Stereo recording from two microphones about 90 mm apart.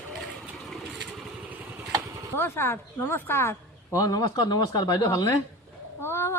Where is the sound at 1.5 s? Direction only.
20° right (ahead or behind).